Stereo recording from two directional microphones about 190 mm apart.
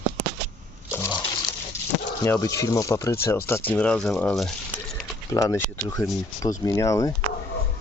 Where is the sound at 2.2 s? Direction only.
15° left (ahead or behind).